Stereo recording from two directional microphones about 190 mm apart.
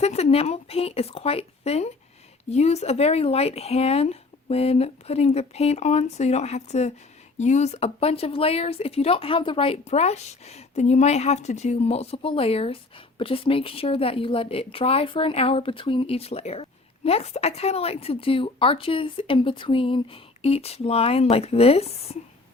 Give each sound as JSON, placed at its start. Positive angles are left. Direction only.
{"t": 0.0, "sound": "a woman's voice", "side_deg": 35}